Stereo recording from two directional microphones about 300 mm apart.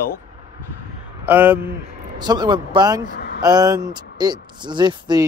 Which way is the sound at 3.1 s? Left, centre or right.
Left.